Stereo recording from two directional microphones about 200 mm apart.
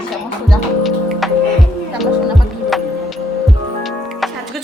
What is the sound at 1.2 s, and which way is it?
Music, centre (ahead or behind).